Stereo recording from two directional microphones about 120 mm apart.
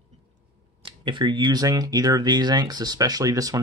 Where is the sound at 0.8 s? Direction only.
40° right (ahead or behind).